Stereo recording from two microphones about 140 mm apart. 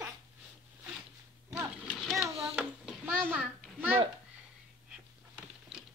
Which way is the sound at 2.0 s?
Centre (ahead or behind).